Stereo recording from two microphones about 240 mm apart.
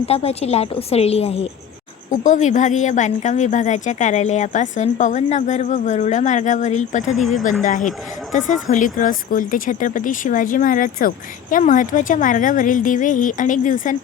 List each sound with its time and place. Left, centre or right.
0.0 s a woman's voice: left
7.1 s speech: centre
7.6 s a woman's voice: left